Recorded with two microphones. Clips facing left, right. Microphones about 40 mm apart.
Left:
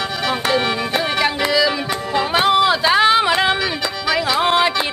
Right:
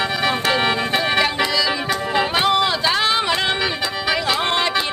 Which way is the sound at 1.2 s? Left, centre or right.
Centre.